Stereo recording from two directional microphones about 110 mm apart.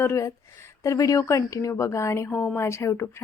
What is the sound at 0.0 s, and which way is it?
Speech, 25° left (ahead or behind).